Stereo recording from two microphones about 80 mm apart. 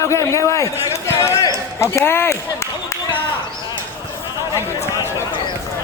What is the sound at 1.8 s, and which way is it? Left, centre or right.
Speech, left.